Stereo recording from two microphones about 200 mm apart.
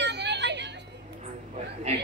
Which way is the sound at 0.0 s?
60° right (ahead or behind).